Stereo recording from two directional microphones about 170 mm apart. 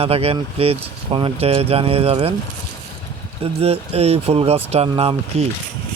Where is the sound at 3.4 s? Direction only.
35° right (ahead or behind).